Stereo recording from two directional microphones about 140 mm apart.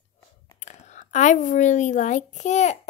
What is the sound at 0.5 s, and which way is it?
A woman's voice, 60° left (ahead or behind).